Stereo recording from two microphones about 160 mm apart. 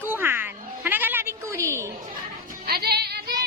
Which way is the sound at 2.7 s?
80° right.